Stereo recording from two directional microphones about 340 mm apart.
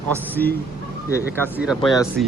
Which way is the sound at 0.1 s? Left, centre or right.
Centre.